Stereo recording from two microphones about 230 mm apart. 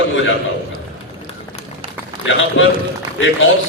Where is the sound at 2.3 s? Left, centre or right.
Left.